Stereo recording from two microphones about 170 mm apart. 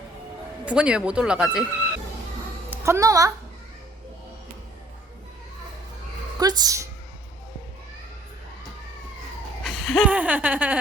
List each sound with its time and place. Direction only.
0.6 s speech: 5° right (ahead or behind)
2.6 s a woman's voice: 15° right (ahead or behind)
6.4 s a woman's voice: 20° right (ahead or behind)
9.6 s speech: centre (ahead or behind)